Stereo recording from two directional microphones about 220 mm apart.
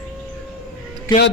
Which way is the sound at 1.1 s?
20° left (ahead or behind).